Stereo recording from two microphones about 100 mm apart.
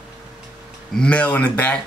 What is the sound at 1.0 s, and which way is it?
Speech, 15° left (ahead or behind).